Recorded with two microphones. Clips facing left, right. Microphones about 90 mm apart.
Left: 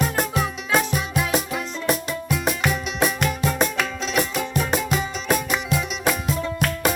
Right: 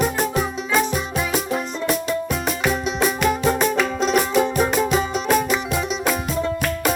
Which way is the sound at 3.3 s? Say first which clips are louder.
Right 4 dB; 40° right (ahead or behind).